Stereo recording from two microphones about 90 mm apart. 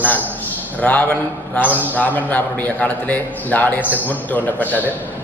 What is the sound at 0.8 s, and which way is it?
A man's voice, 15° left (ahead or behind).